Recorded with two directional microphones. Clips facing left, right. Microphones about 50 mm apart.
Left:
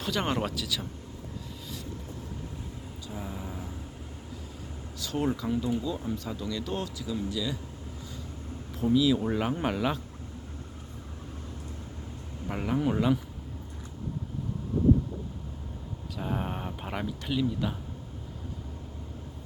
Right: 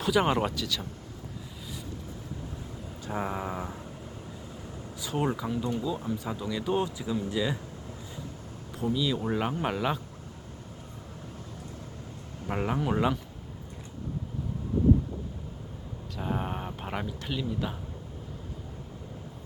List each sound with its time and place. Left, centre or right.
0.0 s speech: centre
3.1 s speech: right
4.9 s speech: centre
8.8 s speech: centre
12.5 s speech: centre
16.1 s a sound: centre